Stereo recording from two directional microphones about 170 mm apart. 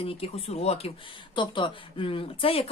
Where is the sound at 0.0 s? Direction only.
35° left (ahead or behind).